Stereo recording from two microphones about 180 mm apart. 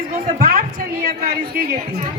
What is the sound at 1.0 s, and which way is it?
Speech, 55° right (ahead or behind).